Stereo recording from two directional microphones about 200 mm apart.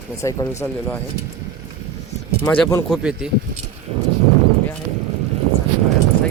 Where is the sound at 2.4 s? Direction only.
10° left (ahead or behind).